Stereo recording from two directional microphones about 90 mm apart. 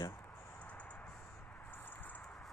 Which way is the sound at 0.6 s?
15° left (ahead or behind).